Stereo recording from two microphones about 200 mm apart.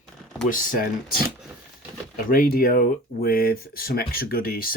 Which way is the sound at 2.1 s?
45° left (ahead or behind).